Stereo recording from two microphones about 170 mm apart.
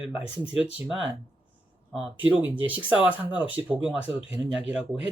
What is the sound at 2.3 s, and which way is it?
Speech, 10° right (ahead or behind).